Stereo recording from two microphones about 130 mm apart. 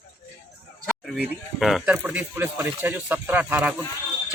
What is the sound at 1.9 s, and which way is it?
Speech, 15° right (ahead or behind).